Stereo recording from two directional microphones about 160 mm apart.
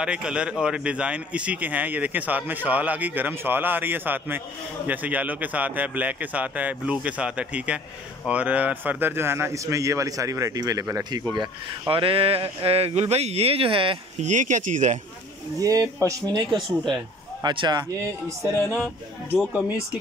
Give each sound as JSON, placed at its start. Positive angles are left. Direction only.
{"t": 0.0, "sound": "a man's voice", "side_deg": -5}
{"t": 14.2, "sound": "speech", "side_deg": -50}
{"t": 15.6, "sound": "a man's voice", "side_deg": -20}